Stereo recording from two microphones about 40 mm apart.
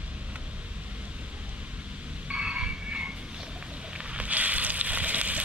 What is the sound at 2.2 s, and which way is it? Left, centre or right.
Frog, right.